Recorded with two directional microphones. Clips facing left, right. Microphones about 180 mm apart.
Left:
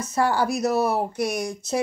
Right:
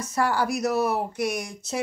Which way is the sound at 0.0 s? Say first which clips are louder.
Left 2 dB; 25° left (ahead or behind).